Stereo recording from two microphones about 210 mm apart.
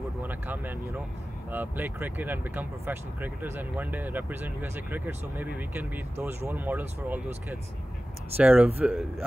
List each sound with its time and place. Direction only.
0.2 s speech: 10° right (ahead or behind)
8.4 s speech: 10° right (ahead or behind)